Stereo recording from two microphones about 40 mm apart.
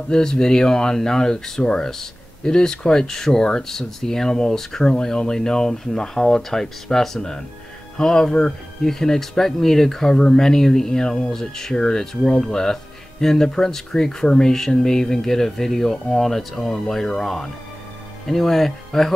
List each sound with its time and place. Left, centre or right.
0.1 s speech: centre